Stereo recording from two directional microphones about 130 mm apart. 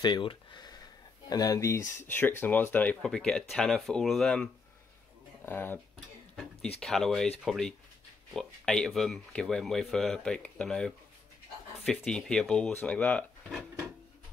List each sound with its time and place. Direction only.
0.0 s speech: 35° left (ahead or behind); by 4.5 s 5° left (ahead or behind)
5.4 s speech: 15° left (ahead or behind)
6.8 s speech: centre (ahead or behind)
13.5 s dishes: centre (ahead or behind)